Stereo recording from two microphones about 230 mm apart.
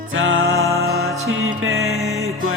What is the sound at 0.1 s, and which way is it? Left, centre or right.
Music, right.